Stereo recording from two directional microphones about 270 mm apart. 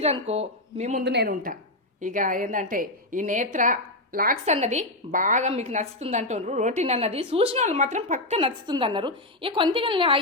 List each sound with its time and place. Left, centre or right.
0.0 s a woman's voice: right
1.0 s a woman's voice: right; by 10.2 s centre